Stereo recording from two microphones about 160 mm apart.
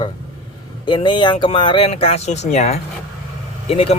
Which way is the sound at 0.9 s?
30° left (ahead or behind).